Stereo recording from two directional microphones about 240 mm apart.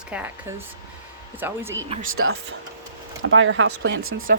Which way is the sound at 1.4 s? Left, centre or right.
Centre.